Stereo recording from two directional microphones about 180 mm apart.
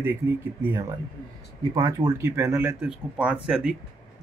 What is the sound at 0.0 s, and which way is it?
Speech, 10° right (ahead or behind).